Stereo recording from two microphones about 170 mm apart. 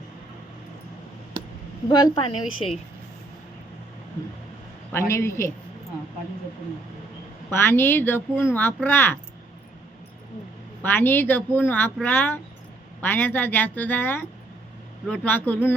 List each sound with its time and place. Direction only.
1.9 s a woman's voice: 25° left (ahead or behind)
4.9 s speech: 15° left (ahead or behind)
7.5 s speech: 15° left (ahead or behind)
10.8 s speech: 10° left (ahead or behind)